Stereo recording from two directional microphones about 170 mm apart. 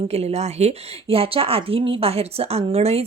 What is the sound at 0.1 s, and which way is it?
A woman's voice, 40° right (ahead or behind).